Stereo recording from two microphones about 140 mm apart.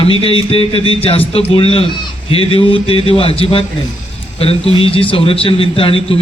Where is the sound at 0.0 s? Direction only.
40° left (ahead or behind).